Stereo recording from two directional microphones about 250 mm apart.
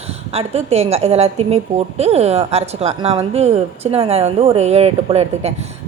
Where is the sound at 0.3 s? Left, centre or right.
Right.